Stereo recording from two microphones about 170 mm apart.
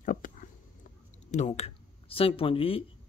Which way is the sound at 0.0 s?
55° left (ahead or behind).